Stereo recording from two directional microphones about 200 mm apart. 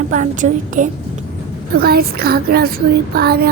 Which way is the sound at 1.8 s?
50° right (ahead or behind).